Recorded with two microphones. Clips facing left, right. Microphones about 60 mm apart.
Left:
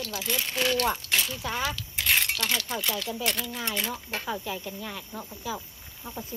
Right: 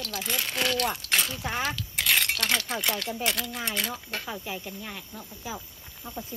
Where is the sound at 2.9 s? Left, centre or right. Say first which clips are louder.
Even; right.